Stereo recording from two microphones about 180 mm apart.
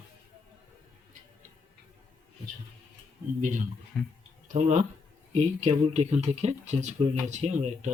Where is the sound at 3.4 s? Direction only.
45° right (ahead or behind).